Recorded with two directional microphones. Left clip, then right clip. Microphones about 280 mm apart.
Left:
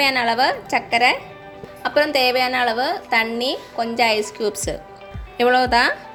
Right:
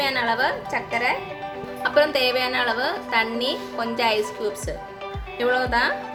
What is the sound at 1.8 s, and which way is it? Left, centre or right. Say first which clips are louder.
A woman's voice: left 2 dB; centre.